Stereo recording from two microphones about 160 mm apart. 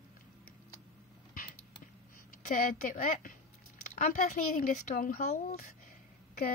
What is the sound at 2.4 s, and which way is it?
Speech, 55° left (ahead or behind).